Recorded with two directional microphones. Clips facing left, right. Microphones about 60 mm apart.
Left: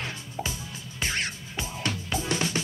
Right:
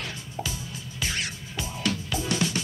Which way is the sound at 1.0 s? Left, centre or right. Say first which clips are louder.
Left 1 dB; left.